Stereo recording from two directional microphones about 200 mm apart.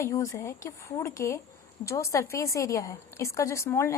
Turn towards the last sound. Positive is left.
turn(degrees=15)  # may be behind; listen again after turning